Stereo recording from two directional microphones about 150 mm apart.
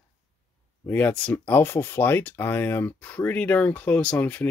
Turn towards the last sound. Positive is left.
turn(degrees=10)  # may be behind; listen again after turning